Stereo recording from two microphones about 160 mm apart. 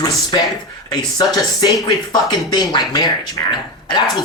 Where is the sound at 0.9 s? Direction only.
25° left (ahead or behind).